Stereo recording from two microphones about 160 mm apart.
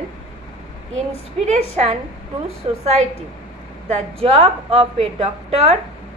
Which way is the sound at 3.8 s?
40° right (ahead or behind).